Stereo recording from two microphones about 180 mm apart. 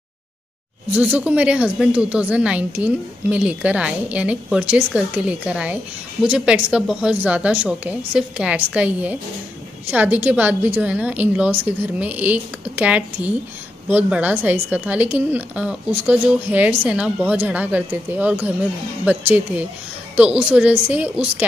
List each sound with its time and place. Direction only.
0.9 s a woman's voice: 10° right (ahead or behind)